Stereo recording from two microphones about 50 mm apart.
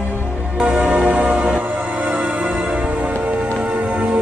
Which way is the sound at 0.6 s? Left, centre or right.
Right.